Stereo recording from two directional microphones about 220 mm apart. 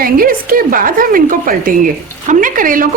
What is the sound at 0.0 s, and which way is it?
A woman's voice, 40° right (ahead or behind).